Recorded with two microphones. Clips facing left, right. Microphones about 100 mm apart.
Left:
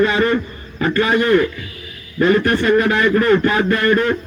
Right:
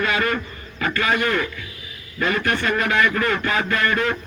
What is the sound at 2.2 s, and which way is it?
A man's voice, 35° left (ahead or behind).